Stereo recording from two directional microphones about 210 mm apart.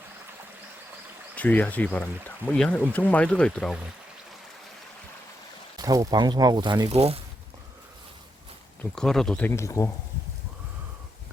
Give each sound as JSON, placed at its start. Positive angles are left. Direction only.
{"t": 1.4, "sound": "speech", "side_deg": 10}
{"t": 5.7, "sound": "speech", "side_deg": -15}
{"t": 8.8, "sound": "speech", "side_deg": 5}